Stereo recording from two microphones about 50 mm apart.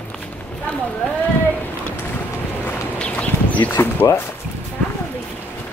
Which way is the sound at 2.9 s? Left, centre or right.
Left.